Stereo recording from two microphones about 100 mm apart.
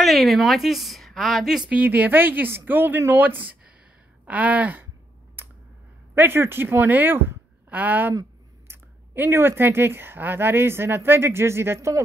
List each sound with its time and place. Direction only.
0.0 s a woman's voice: centre (ahead or behind)
1.7 s speech: 15° right (ahead or behind)
5.4 s a sound: 20° right (ahead or behind)
6.1 s speech: 25° right (ahead or behind)